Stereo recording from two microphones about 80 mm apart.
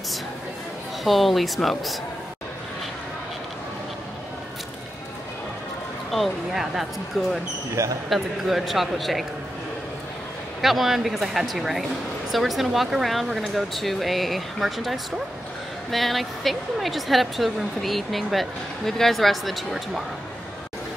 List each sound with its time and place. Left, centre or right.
1.0 s speech: centre
6.1 s speech: centre
7.7 s speech: right
8.1 s speech: centre
10.6 s speech: centre